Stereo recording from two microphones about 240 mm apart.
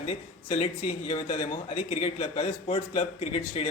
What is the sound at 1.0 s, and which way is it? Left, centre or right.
A man's voice, left.